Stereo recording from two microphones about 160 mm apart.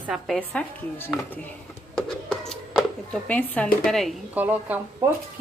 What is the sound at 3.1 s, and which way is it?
Speech, 10° left (ahead or behind).